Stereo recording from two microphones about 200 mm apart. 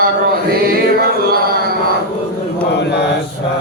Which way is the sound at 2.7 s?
60° left (ahead or behind).